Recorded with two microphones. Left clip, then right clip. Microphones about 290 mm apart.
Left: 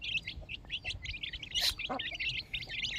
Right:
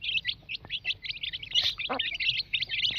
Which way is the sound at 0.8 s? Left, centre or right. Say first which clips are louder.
Right 7 dB; centre.